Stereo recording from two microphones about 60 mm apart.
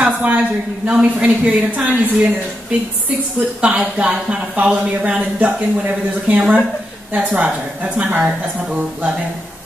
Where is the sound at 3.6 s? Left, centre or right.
Centre.